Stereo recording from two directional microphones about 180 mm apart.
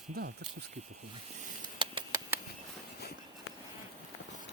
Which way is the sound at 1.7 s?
25° right (ahead or behind).